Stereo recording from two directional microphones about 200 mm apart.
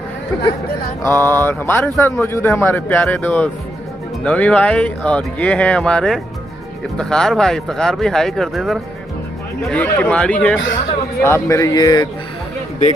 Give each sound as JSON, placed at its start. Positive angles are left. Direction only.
{"t": 1.0, "sound": "a man's voice", "side_deg": 10}